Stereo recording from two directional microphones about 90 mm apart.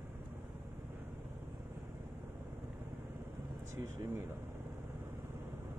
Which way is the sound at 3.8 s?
35° right (ahead or behind).